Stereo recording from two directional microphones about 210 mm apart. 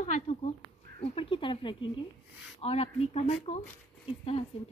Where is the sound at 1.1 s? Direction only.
25° left (ahead or behind).